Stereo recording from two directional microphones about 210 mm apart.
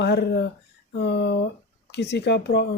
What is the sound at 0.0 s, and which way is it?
Speech, 50° left (ahead or behind).